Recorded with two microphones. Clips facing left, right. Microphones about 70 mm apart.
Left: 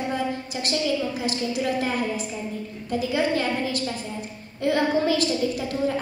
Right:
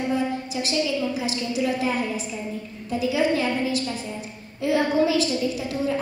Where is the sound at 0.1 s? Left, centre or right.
Left.